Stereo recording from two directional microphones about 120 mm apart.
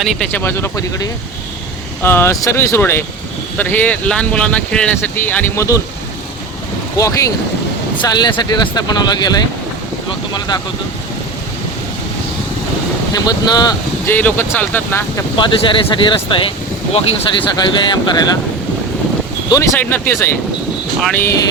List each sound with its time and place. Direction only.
0.0 s speech: centre (ahead or behind)
0.3 s speech: 20° left (ahead or behind)
6.9 s speech: 30° left (ahead or behind)
13.1 s speech: 35° left (ahead or behind)
14.1 s speech: 15° left (ahead or behind)
15.4 s speech: 45° left (ahead or behind)
16.9 s speech: 55° left (ahead or behind)
17.6 s speech: 40° left (ahead or behind)
19.8 s speech: 20° left (ahead or behind)